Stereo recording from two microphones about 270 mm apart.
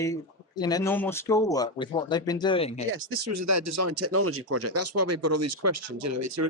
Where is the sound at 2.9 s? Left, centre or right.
Right.